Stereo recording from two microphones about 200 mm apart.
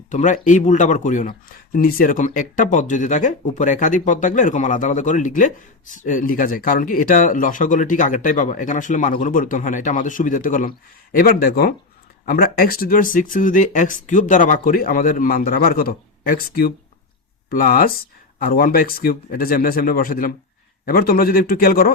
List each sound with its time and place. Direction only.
0.1 s speech: 35° left (ahead or behind)